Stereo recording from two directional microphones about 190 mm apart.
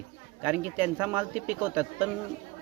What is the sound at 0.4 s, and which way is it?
Speech, 10° right (ahead or behind).